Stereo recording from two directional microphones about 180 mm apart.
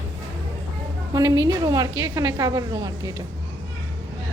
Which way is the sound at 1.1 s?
20° right (ahead or behind).